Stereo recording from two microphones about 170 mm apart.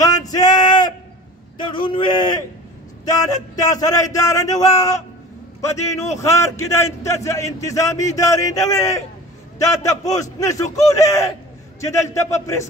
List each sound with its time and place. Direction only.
0.0 s a sound: 20° left (ahead or behind)
1.6 s speech: 30° left (ahead or behind)
6.1 s a man's voice: 15° left (ahead or behind)